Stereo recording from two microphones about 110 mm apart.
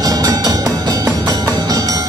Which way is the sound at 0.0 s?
35° right (ahead or behind).